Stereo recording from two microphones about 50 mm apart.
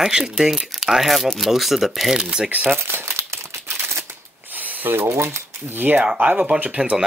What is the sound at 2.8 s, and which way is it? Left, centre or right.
Crumpling, right.